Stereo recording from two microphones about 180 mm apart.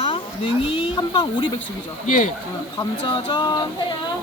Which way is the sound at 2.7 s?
25° left (ahead or behind).